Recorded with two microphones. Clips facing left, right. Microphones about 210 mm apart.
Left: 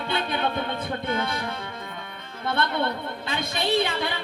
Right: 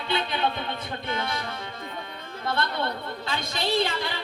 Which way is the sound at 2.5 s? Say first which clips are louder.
Left 3 dB; 55° left (ahead or behind).